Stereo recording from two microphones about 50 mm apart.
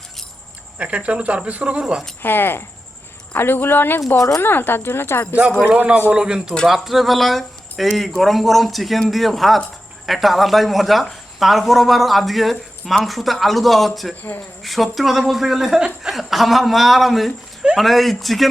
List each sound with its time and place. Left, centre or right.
0.8 s speech: right
2.2 s speech: left
5.6 s speech: right
6.1 s a man's voice: centre